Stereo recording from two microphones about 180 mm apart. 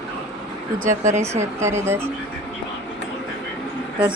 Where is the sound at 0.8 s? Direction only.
40° right (ahead or behind).